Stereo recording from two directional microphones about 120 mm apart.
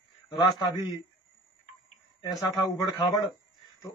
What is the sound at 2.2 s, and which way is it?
Speech, 30° left (ahead or behind).